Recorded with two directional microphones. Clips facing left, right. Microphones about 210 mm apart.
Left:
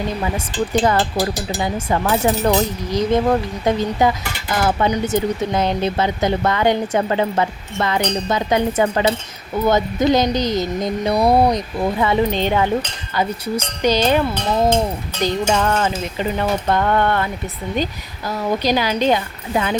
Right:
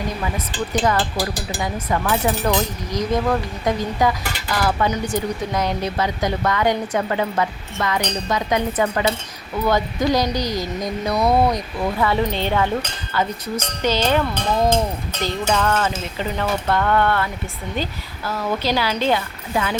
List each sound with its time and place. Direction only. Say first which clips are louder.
0.9 s speech: left 3 dB; 25° left (ahead or behind)
13.8 s speech: left 3 dB; 15° left (ahead or behind)
18.3 s speech: left 3 dB; 15° left (ahead or behind)